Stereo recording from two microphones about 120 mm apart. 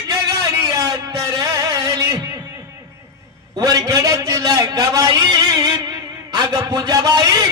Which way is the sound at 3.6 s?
30° right (ahead or behind).